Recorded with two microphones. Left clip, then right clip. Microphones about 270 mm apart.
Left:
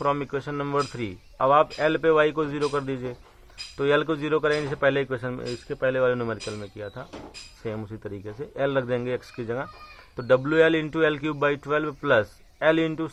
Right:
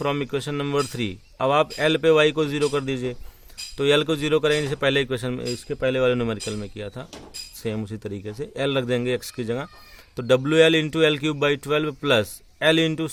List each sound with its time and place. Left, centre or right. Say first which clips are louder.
0.0 s a man's voice: right 1 dB; right